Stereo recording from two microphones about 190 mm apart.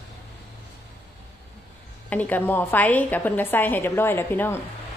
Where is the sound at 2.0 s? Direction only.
10° left (ahead or behind).